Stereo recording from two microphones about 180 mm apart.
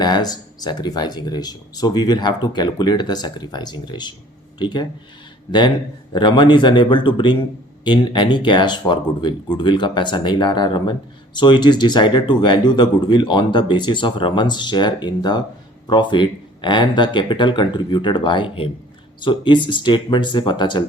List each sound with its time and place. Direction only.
0.0 s speech: 20° left (ahead or behind)